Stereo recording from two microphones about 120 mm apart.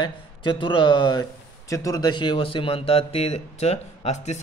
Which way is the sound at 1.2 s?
30° left (ahead or behind).